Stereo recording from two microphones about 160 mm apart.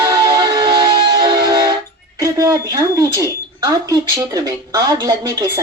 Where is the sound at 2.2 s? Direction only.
20° right (ahead or behind).